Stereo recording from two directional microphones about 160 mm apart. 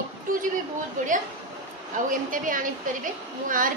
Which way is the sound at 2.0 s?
55° right (ahead or behind).